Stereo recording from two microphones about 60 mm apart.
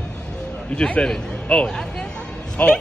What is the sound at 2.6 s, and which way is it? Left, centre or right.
Speech, left.